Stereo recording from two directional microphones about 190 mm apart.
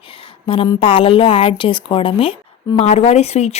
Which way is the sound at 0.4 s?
30° left (ahead or behind).